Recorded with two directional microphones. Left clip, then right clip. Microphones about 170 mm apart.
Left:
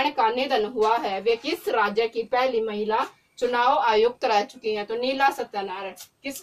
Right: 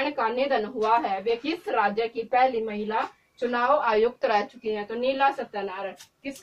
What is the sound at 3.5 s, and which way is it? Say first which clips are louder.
A woman's voice: left 2 dB; 45° left (ahead or behind).